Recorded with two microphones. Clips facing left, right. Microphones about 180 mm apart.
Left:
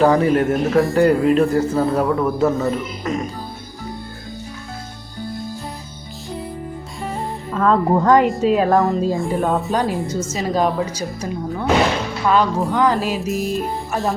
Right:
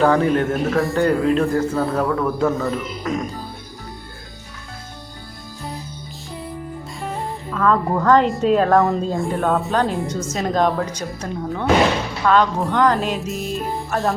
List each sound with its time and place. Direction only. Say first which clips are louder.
0.0 s speech: left 2 dB; 5° left (ahead or behind)
7.5 s speech: left 3 dB; 30° left (ahead or behind)
8.0 s a woman's voice: even; 10° left (ahead or behind)
8.3 s a woman's voice: even; centre (ahead or behind)